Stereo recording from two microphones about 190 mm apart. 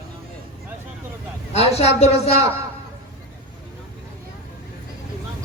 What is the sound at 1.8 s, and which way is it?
Speech, 35° left (ahead or behind).